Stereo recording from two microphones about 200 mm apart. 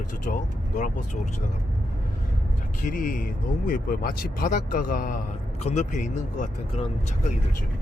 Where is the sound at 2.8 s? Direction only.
45° left (ahead or behind).